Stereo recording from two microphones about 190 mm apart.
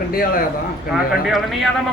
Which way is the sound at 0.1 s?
50° left (ahead or behind).